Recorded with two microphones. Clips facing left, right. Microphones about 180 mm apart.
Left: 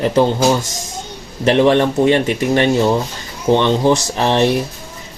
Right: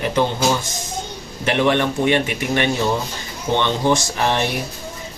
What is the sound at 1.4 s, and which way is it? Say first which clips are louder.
Speech: left 6 dB; 30° left (ahead or behind).